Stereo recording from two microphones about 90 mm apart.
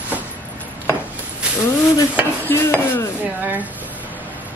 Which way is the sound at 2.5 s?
25° left (ahead or behind).